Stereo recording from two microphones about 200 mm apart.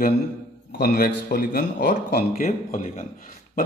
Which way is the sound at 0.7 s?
50° left (ahead or behind).